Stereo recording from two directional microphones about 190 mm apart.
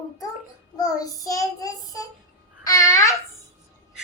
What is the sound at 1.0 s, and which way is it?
Child singing, 20° left (ahead or behind).